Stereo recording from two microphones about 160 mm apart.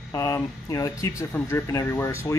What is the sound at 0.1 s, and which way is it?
Speech, 20° left (ahead or behind).